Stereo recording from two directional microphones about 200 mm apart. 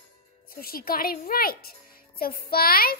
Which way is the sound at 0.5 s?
50° left (ahead or behind).